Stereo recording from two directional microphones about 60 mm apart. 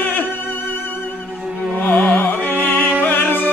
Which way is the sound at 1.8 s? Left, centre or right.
Left.